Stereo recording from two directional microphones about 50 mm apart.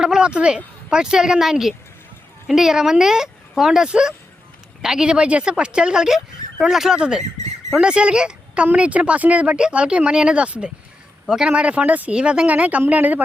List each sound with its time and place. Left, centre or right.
0.0 s speech: centre
6.9 s speech: centre; by 13.2 s right